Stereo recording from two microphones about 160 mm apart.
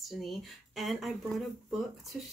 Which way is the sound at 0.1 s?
Centre (ahead or behind).